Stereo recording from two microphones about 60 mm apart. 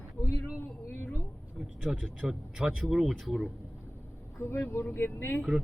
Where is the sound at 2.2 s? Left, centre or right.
Centre.